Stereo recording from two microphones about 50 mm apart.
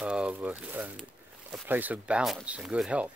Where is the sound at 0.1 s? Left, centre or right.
Right.